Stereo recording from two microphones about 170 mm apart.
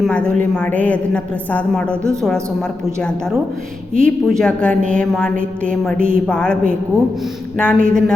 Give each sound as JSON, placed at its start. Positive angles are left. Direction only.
{"t": 0.0, "sound": "a woman's voice", "side_deg": 5}